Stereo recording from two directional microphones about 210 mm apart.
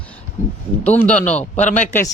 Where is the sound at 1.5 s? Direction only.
35° left (ahead or behind).